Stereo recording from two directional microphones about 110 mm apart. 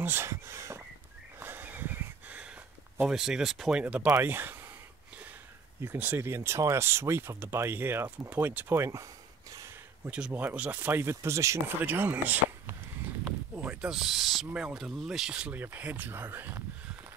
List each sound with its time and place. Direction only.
0.0 s a sound: 20° right (ahead or behind); by 3.8 s 5° right (ahead or behind)
3.8 s speech: 15° right (ahead or behind)
4.1 s a sound: 20° right (ahead or behind)
5.8 s speech: 20° right (ahead or behind)
10.0 s speech: 10° right (ahead or behind)
13.6 s owl: 10° right (ahead or behind)
14.5 s speech: 5° right (ahead or behind)